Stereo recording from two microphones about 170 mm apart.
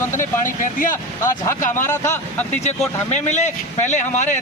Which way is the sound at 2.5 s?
40° left (ahead or behind).